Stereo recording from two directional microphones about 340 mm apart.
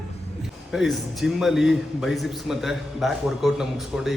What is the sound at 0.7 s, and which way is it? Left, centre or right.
A man's voice, centre.